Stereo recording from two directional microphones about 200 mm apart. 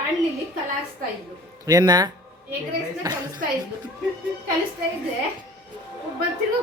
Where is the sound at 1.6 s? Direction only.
20° right (ahead or behind).